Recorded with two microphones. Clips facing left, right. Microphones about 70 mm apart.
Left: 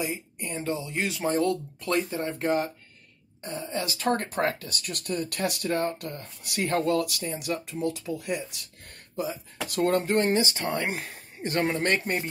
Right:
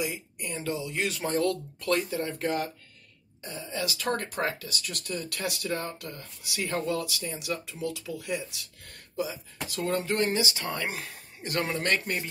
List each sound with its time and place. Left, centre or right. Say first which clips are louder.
0.0 s speech: left 1 dB; left
3.4 s speech: left 2 dB; left
10.1 s speech: left 3 dB; left